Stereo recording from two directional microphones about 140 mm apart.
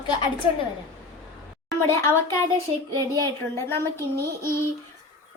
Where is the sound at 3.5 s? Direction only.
20° left (ahead or behind).